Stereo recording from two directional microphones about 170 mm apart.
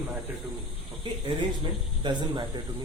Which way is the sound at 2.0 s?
25° right (ahead or behind).